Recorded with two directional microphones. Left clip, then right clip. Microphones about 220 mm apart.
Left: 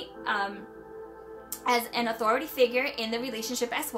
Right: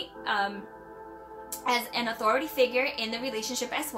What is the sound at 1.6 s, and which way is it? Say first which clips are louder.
A woman's voice: left 1 dB; 30° left (ahead or behind).